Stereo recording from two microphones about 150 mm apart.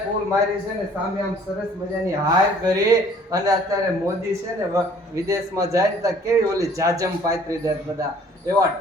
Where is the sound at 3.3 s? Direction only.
25° right (ahead or behind).